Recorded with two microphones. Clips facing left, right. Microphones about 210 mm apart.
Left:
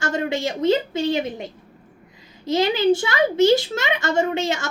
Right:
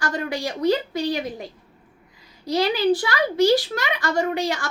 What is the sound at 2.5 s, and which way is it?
A child's voice, 25° left (ahead or behind).